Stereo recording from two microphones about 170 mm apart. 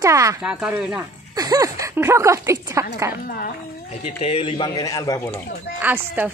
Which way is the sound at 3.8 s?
40° left (ahead or behind).